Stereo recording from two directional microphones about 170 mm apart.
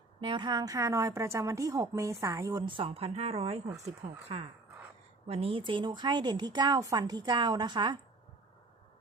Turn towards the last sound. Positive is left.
turn(degrees=-25)  # may be behind; listen again after turning